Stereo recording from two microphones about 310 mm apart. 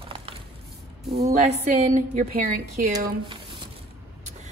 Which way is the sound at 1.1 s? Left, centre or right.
Right.